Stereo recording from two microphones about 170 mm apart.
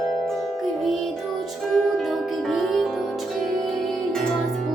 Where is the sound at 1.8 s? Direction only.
Centre (ahead or behind).